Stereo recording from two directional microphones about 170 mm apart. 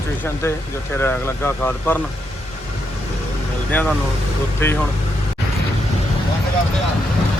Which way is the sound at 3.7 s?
10° left (ahead or behind).